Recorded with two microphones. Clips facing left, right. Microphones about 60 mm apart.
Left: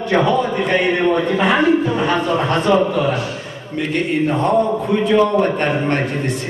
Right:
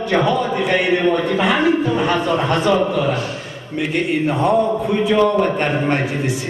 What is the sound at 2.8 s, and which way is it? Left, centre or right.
Mantra, centre.